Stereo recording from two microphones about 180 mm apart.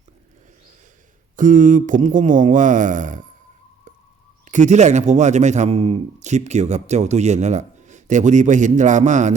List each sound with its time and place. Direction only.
1.4 s speech: 45° right (ahead or behind)
4.4 s speech: 40° right (ahead or behind)